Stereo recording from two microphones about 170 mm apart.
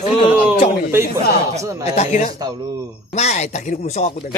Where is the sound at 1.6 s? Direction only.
20° right (ahead or behind).